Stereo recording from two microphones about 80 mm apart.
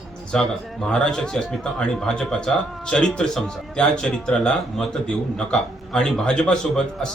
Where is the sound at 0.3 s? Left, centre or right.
Centre.